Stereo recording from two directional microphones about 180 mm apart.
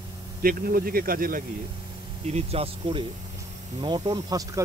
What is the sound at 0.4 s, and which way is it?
Speech, 55° right (ahead or behind).